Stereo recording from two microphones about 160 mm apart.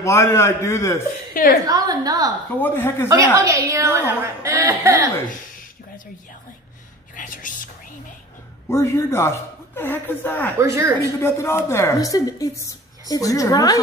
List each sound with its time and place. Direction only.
0.0 s a woman's voice: 20° left (ahead or behind)
1.3 s a woman's voice: 60° left (ahead or behind)
1.7 s a woman's voice: 25° right (ahead or behind)
2.6 s a woman's voice: 15° left (ahead or behind)
3.1 s a woman's voice: 20° right (ahead or behind)
7.2 s whispering: 55° left (ahead or behind)
8.6 s a woman's voice: 15° left (ahead or behind)
10.6 s a woman's voice: 20° right (ahead or behind)
11.1 s a woman's voice: 15° left (ahead or behind)